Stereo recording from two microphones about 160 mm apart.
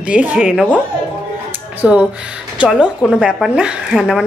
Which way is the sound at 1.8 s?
5° right (ahead or behind).